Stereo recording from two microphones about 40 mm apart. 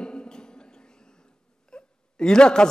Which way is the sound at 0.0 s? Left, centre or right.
Left.